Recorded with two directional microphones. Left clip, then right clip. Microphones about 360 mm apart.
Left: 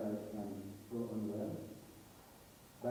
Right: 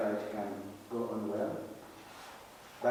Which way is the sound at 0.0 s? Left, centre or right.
Centre.